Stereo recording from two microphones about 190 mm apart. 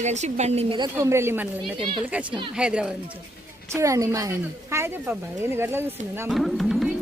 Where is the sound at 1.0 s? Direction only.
15° right (ahead or behind).